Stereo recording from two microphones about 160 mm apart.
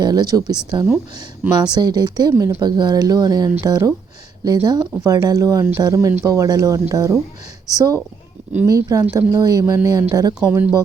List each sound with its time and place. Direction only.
0.0 s speech: 25° right (ahead or behind)